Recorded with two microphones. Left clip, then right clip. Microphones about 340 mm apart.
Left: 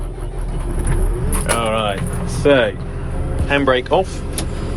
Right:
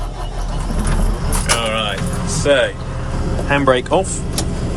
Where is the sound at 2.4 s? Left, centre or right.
Centre.